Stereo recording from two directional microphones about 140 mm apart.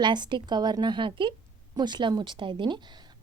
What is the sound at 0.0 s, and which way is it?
A woman's voice, 35° right (ahead or behind).